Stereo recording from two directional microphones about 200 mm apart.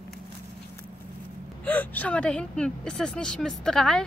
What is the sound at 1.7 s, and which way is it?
Speech, 10° left (ahead or behind).